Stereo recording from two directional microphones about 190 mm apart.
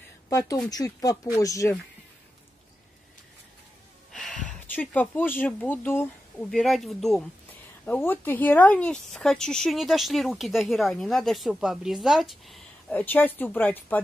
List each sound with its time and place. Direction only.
0.3 s speech: 15° left (ahead or behind)
4.1 s gasp: centre (ahead or behind)
4.5 s speech: 10° left (ahead or behind)